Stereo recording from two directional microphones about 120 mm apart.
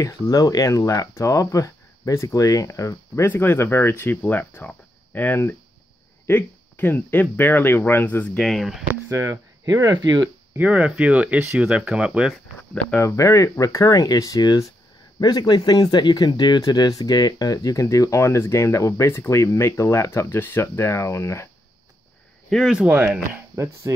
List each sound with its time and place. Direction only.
0.0 s speech: 30° left (ahead or behind); by 8.5 s 15° left (ahead or behind)
8.5 s speech: centre (ahead or behind)
9.1 s speech: 25° right (ahead or behind)
10.5 s speech: 15° right (ahead or behind)
13.0 s speech: 25° left (ahead or behind)
22.5 s speech: centre (ahead or behind); by 23.9 s 20° right (ahead or behind)